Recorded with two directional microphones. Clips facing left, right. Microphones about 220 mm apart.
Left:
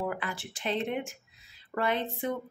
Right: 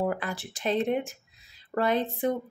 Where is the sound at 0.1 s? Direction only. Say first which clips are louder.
Right 4 dB; 40° right (ahead or behind).